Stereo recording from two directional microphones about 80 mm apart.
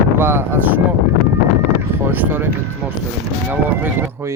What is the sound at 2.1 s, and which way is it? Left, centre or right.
Speech, right.